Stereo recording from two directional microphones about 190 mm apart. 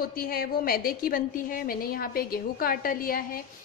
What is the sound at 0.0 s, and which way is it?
A woman's voice, 50° left (ahead or behind).